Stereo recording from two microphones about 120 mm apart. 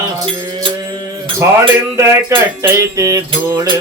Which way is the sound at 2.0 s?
25° right (ahead or behind).